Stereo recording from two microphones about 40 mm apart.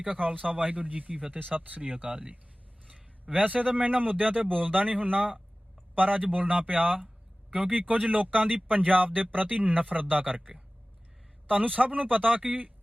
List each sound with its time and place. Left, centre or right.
0.0 s speech: right
2.0 s speech: right
3.3 s speech: right